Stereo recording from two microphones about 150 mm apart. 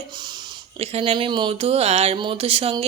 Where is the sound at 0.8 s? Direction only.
40° right (ahead or behind).